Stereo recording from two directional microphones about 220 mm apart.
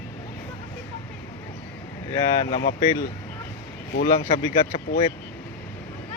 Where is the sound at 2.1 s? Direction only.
20° left (ahead or behind).